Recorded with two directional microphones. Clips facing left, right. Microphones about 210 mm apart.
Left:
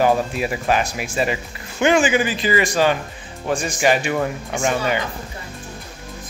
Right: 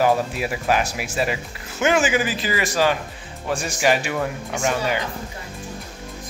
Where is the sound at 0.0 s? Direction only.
5° right (ahead or behind).